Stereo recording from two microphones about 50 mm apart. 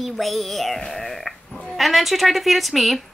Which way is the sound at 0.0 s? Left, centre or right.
Centre.